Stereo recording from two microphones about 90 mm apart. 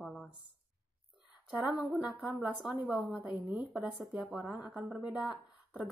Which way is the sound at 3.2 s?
15° right (ahead or behind).